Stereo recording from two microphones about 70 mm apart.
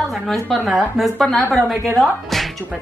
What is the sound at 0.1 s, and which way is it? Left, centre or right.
A woman's voice, centre.